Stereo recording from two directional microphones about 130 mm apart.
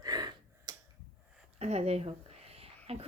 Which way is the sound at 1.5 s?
55° right (ahead or behind).